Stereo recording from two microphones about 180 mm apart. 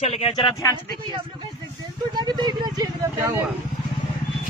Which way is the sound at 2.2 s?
20° right (ahead or behind).